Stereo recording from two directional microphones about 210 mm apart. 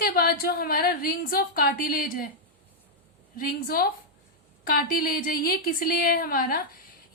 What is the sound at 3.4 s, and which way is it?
A woman's voice, 45° left (ahead or behind).